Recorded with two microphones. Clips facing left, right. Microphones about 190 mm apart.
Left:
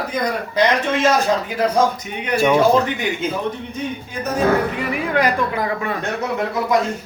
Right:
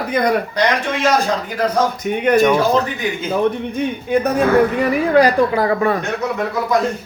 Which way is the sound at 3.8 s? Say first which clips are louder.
Right 9 dB; 60° right (ahead or behind).